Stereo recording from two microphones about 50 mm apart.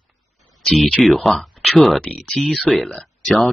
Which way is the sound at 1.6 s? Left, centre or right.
Centre.